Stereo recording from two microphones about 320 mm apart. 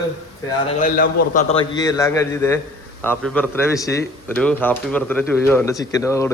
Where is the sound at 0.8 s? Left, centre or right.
Left.